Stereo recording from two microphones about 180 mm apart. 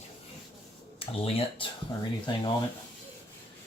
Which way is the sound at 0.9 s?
30° left (ahead or behind).